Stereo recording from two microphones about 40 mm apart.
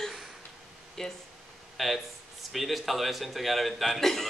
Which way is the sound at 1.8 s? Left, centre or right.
Centre.